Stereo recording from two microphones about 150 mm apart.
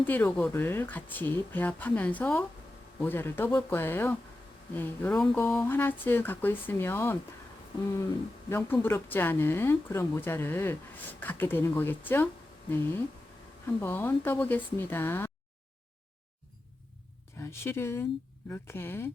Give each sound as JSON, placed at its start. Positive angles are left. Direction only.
{"t": 0.0, "sound": "speech", "side_deg": 10}
{"t": 8.4, "sound": "speech", "side_deg": 15}
{"t": 13.7, "sound": "speech", "side_deg": 15}
{"t": 17.4, "sound": "speech", "side_deg": 15}